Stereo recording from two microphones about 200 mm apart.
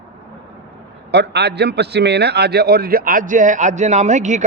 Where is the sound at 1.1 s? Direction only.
55° right (ahead or behind).